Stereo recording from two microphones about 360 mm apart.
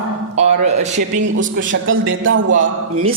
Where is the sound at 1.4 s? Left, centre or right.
Right.